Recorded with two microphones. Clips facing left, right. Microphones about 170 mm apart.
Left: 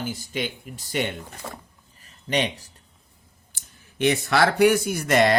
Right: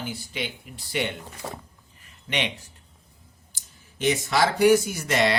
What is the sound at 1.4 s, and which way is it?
Speech, 10° right (ahead or behind).